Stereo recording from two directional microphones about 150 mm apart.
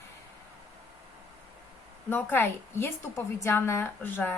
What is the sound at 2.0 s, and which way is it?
A woman's voice, 15° left (ahead or behind).